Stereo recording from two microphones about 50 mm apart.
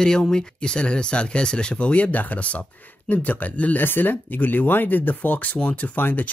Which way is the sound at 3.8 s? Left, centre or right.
Left.